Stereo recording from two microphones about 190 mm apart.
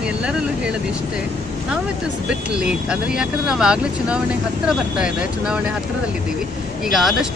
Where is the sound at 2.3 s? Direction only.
5° right (ahead or behind).